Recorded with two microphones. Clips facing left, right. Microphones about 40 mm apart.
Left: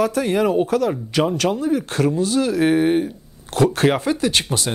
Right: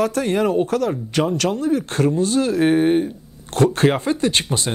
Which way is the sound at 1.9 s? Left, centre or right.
Centre.